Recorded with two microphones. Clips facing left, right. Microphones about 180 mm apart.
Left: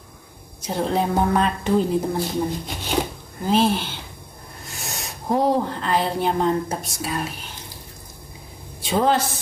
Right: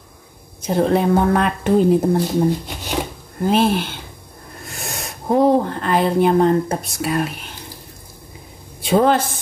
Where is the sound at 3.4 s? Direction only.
60° right (ahead or behind).